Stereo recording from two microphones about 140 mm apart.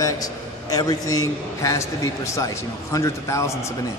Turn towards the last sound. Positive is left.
turn(degrees=20)  # may be behind; listen again after turning